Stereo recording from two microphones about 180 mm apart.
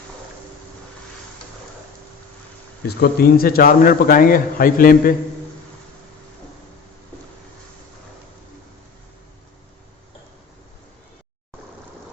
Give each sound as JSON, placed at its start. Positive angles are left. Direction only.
{"t": 2.8, "sound": "a man's voice", "side_deg": 60}